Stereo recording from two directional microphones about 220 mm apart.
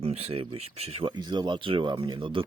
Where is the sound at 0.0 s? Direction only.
25° right (ahead or behind).